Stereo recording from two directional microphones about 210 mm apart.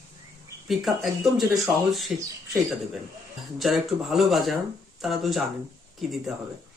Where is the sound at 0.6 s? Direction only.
Centre (ahead or behind).